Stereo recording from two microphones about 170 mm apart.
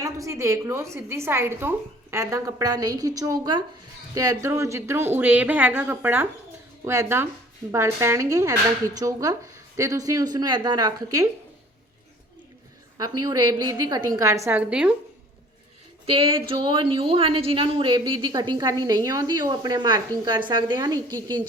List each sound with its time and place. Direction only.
0.0 s a woman's voice: 20° right (ahead or behind)
13.0 s speech: 20° right (ahead or behind)
16.0 s speech: 30° right (ahead or behind)